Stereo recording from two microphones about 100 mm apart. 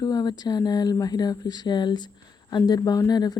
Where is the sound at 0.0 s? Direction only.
40° left (ahead or behind).